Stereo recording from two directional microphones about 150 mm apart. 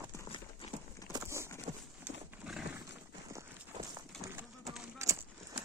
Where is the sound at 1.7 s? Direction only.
60° right (ahead or behind).